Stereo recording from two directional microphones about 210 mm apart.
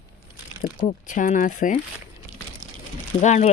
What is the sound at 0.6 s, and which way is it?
Speech, 40° left (ahead or behind).